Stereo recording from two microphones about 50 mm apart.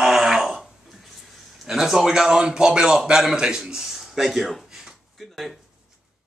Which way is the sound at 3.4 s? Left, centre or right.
Centre.